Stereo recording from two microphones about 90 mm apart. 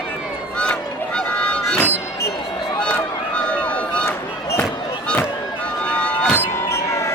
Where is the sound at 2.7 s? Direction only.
15° left (ahead or behind).